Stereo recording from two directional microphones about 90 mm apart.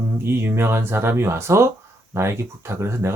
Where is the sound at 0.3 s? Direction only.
25° right (ahead or behind).